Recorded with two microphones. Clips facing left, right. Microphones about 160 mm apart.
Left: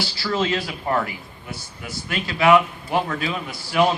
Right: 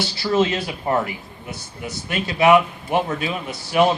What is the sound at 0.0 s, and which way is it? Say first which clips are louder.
Speech: right 4 dB; 20° right (ahead or behind).